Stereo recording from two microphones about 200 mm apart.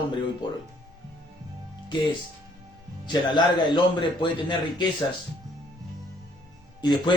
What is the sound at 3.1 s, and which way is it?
A man's voice, 25° left (ahead or behind).